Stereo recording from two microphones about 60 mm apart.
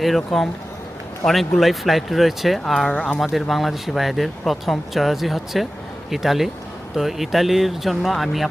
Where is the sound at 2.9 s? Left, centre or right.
Centre.